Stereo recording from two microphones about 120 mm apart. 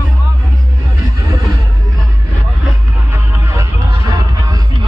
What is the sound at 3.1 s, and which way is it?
Music, 25° right (ahead or behind).